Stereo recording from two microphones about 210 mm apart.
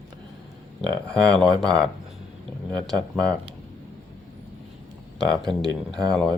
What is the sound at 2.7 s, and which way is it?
Speech, 5° left (ahead or behind).